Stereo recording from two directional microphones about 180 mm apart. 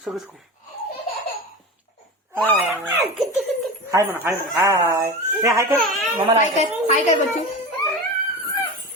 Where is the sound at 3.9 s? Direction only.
15° right (ahead or behind).